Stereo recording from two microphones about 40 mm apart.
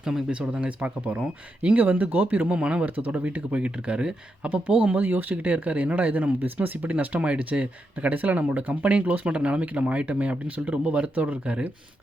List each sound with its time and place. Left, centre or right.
0.0 s speech: centre
0.3 s speech: right
0.9 s speech: right
2.8 s speech: right
4.4 s speech: right